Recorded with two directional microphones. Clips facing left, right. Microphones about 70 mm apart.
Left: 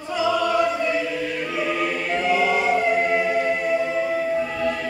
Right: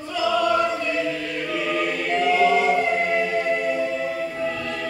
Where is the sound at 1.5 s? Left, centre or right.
Centre.